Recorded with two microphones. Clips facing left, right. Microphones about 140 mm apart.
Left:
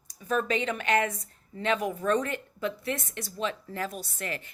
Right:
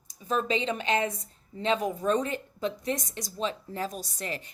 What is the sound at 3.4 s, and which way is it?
Speech, 30° right (ahead or behind).